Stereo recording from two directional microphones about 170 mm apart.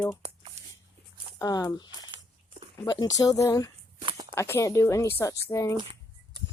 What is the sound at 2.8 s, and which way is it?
A woman's voice, 20° left (ahead or behind).